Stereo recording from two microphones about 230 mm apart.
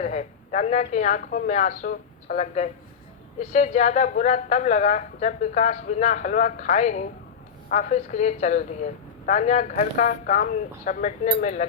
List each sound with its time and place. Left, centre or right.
0.0 s a woman's voice: left